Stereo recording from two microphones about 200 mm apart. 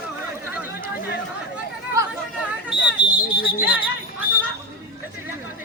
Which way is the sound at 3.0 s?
25° left (ahead or behind).